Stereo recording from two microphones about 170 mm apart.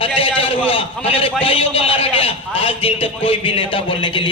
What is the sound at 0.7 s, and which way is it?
A man's voice, 35° left (ahead or behind).